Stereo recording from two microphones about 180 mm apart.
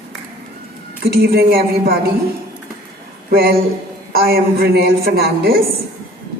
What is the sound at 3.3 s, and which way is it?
A woman's voice, 55° right (ahead or behind).